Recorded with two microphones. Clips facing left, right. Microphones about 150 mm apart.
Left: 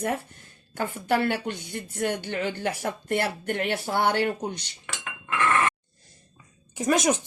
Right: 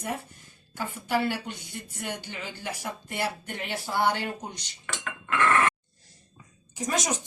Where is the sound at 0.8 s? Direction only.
60° left (ahead or behind).